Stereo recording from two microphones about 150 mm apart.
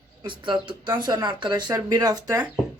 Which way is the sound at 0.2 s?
30° right (ahead or behind).